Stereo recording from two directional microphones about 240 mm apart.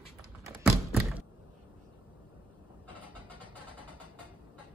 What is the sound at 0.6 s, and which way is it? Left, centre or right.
Tap, centre.